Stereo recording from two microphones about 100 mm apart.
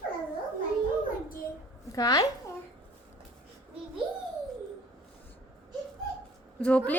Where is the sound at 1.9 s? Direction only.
40° left (ahead or behind).